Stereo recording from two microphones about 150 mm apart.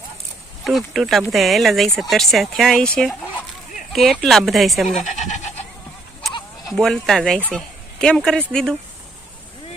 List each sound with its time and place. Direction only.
0.6 s speech: centre (ahead or behind)
5.0 s bleat: 50° left (ahead or behind)
6.7 s speech: 5° left (ahead or behind)